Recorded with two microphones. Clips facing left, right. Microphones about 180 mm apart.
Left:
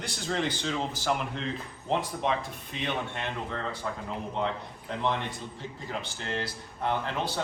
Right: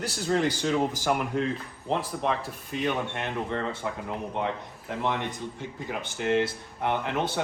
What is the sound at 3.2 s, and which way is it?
Speech, 20° right (ahead or behind).